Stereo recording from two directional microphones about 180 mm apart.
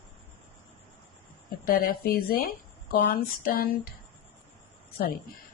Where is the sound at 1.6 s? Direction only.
55° left (ahead or behind).